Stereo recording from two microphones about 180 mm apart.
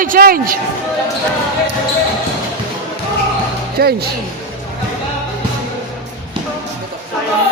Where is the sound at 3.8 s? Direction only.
60° right (ahead or behind).